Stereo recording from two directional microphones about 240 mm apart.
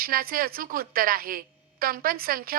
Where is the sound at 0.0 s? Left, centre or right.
Right.